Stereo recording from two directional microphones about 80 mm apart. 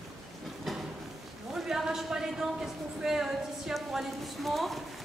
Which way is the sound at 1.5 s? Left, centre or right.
Centre.